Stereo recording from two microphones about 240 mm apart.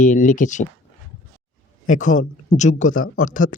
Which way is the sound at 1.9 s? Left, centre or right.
Left.